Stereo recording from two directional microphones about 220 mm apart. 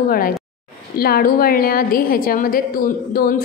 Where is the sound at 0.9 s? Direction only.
45° left (ahead or behind).